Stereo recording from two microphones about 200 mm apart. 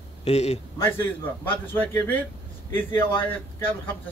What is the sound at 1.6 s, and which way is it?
Speech, 10° left (ahead or behind).